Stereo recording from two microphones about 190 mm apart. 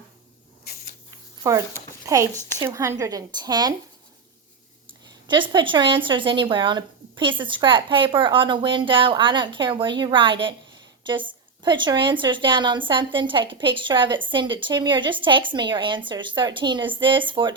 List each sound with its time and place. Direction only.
1.5 s a woman's voice: 15° right (ahead or behind)
4.9 s speech: 25° right (ahead or behind)
11.6 s speech: 25° right (ahead or behind)